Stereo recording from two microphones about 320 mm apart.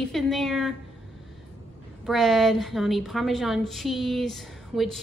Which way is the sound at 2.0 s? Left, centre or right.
Centre.